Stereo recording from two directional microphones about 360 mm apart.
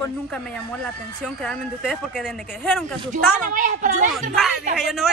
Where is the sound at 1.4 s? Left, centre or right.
Centre.